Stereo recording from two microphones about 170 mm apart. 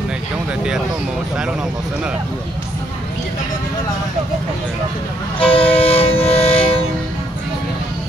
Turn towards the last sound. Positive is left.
turn(degrees=35)  # may be behind; listen again after turning